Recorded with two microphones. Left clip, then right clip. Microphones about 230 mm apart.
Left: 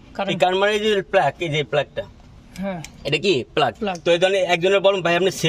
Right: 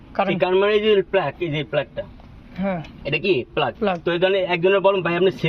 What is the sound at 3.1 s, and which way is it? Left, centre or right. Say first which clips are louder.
A man's voice: left 1 dB; left.